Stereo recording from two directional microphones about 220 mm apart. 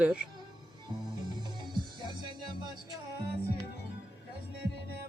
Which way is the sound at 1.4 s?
20° right (ahead or behind).